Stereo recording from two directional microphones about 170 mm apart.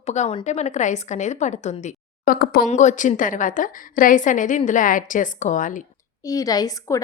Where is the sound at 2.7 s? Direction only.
45° left (ahead or behind).